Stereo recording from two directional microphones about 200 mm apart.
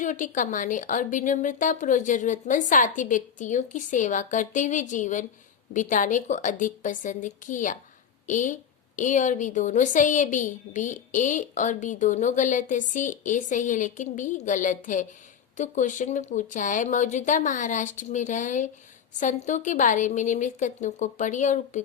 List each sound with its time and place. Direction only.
0.0 s a woman's voice: 40° left (ahead or behind)